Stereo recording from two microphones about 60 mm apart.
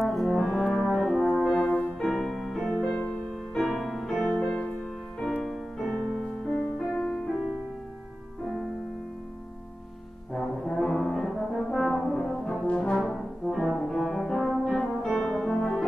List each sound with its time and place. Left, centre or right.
0.0 s brass instrument: centre
0.8 s brass instrument: centre
1.3 s french horn: centre
1.6 s music: left
2.0 s music: centre
2.8 s music: centre
3.7 s music: centre
5.9 s music: centre
10.3 s brass instrument: centre
12.9 s brass instrument: centre